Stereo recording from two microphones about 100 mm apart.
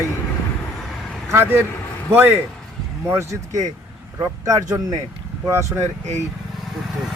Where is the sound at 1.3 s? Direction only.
25° right (ahead or behind).